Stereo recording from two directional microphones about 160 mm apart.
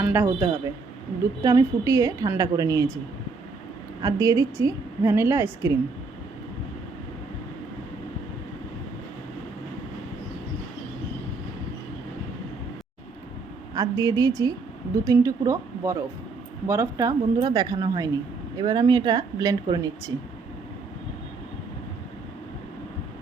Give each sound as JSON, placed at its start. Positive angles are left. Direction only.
{"t": 0.0, "sound": "a woman's voice", "side_deg": -10}
{"t": 4.0, "sound": "a woman's voice", "side_deg": -20}
{"t": 13.7, "sound": "a woman's voice", "side_deg": -20}